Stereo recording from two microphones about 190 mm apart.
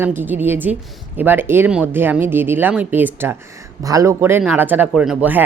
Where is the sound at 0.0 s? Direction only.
10° right (ahead or behind).